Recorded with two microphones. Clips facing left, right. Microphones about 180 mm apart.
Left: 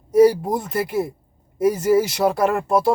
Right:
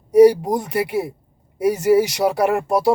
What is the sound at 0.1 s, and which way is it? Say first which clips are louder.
Speech: right 3 dB; 15° right (ahead or behind).